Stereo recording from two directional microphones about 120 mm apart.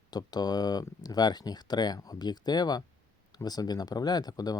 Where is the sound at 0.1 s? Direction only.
35° left (ahead or behind).